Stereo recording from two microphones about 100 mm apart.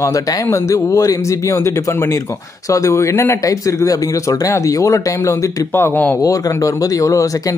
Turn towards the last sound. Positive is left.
turn(degrees=35)  # may be behind; listen again after turning